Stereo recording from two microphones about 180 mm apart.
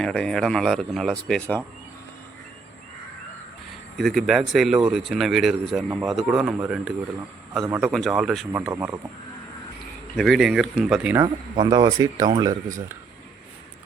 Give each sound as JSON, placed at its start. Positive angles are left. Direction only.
{"t": 0.0, "sound": "speech", "side_deg": 5}
{"t": 3.9, "sound": "speech", "side_deg": 0}
{"t": 8.7, "sound": "speech", "side_deg": -15}
{"t": 10.2, "sound": "speech", "side_deg": 0}
{"t": 11.2, "sound": "speech", "side_deg": -25}